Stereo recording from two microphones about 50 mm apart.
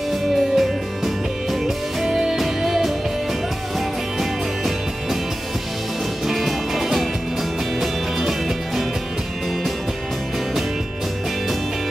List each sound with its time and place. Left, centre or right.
0.6 s music: centre
4.2 s music: centre
6.2 s music: centre